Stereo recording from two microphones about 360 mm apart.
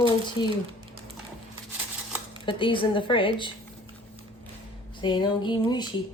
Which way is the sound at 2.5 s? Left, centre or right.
Centre.